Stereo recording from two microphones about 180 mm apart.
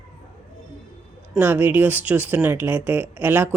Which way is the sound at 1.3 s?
10° right (ahead or behind).